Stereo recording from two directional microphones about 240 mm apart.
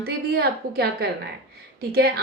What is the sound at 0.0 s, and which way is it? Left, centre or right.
A woman's voice, right.